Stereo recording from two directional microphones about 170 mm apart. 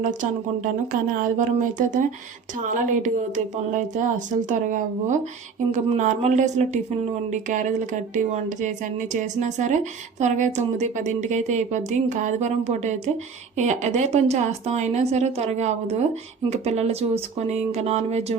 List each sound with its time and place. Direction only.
0.0 s a woman's voice: 50° right (ahead or behind)